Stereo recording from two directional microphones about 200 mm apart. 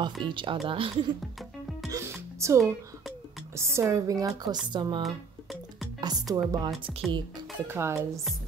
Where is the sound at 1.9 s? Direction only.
15° right (ahead or behind).